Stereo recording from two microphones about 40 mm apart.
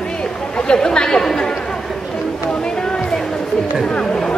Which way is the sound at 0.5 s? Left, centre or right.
Left.